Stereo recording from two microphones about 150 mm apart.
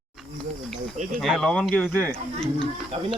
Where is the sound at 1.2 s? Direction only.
Centre (ahead or behind).